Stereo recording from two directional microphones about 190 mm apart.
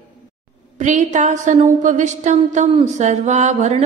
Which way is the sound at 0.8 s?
40° right (ahead or behind).